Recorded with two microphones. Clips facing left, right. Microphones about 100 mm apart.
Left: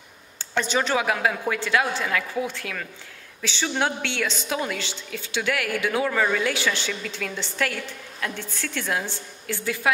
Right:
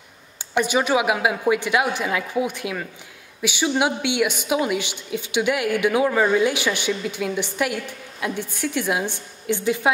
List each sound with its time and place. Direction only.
0.4 s a woman's voice: 15° right (ahead or behind)